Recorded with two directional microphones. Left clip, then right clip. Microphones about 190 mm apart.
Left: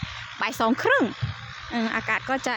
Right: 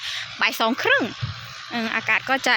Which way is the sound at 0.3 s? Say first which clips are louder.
Right 3 dB; 10° left (ahead or behind).